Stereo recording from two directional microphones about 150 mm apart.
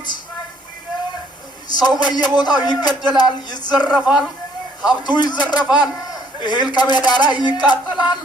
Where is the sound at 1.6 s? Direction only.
30° left (ahead or behind).